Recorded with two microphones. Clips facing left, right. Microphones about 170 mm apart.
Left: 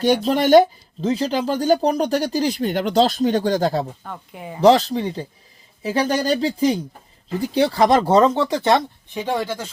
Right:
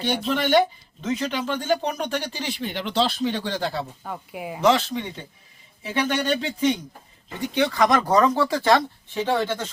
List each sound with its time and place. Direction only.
0.0 s speech: 40° left (ahead or behind)
4.0 s speech: 5° right (ahead or behind)
4.6 s speech: 35° left (ahead or behind); by 9.6 s 10° left (ahead or behind)